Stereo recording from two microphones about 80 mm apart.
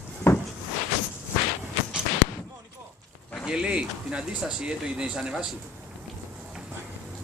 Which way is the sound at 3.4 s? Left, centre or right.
Centre.